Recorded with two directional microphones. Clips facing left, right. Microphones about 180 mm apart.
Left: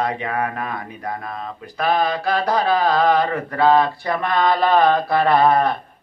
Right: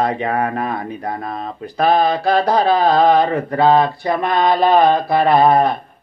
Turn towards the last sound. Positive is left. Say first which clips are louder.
# right 3 dB
turn(degrees=-15)  # may be behind; listen again after turning